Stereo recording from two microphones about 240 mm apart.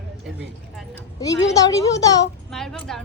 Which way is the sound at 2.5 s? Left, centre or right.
Centre.